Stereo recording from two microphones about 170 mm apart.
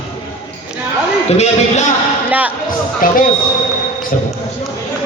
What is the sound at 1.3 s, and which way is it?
Speech, 40° left (ahead or behind).